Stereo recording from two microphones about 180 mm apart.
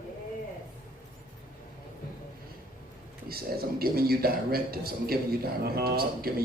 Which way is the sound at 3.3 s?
55° right (ahead or behind).